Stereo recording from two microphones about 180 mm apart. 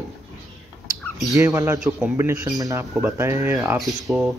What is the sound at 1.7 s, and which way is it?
Speech, centre (ahead or behind).